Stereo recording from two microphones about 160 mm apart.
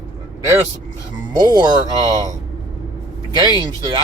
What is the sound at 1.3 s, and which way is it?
Speech, 25° right (ahead or behind).